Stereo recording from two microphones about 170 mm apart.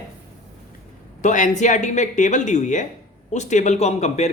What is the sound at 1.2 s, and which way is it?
Speech, 45° left (ahead or behind).